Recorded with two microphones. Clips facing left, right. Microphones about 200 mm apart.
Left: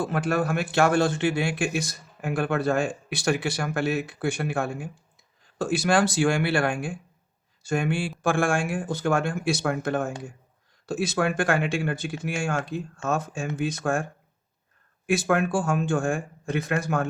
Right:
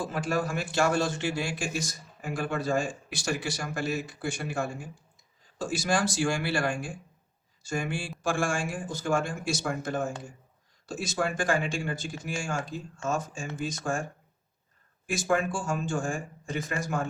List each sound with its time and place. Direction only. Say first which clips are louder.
0.0 s a man's voice: left 4 dB; 60° left (ahead or behind)